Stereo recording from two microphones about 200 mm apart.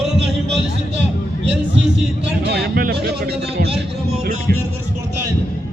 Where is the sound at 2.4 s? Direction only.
55° right (ahead or behind).